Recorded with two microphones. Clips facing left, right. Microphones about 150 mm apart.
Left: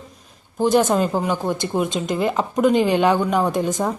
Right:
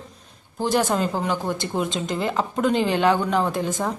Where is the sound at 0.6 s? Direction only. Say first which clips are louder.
Left 5 dB; 20° left (ahead or behind).